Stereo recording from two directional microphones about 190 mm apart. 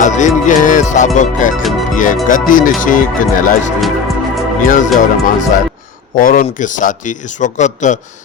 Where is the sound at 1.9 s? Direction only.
45° left (ahead or behind).